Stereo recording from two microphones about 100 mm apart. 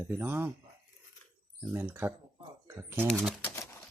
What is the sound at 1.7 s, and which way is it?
Speech, 20° right (ahead or behind).